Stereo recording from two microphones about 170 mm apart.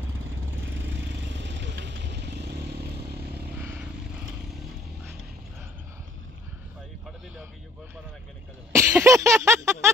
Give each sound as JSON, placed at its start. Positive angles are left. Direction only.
{"t": 0.7, "sound": "vehicle", "side_deg": -90}
{"t": 3.5, "sound": "vehicle", "side_deg": -10}
{"t": 8.7, "sound": "a sound", "side_deg": -15}